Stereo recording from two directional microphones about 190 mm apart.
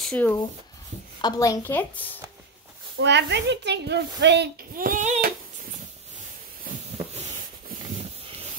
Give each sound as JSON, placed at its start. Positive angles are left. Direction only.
{"t": 0.0, "sound": "speech", "side_deg": 5}
{"t": 1.2, "sound": "a woman's voice", "side_deg": 20}
{"t": 3.0, "sound": "a woman's voice", "side_deg": -65}
{"t": 4.7, "sound": "a sound", "side_deg": -45}